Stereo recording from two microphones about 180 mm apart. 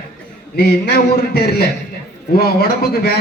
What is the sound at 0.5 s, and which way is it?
A man's voice, 60° left (ahead or behind).